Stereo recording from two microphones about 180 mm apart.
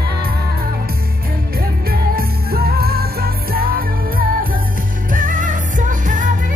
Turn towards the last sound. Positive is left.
turn(degrees=-45)  # may be behind; listen again after turning